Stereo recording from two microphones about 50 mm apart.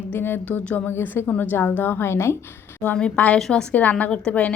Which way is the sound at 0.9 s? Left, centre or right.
Left.